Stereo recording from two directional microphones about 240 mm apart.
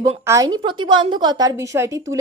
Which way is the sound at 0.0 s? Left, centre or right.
Centre.